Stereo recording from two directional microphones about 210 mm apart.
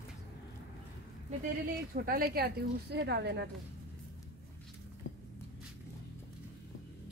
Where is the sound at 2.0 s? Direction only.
45° right (ahead or behind).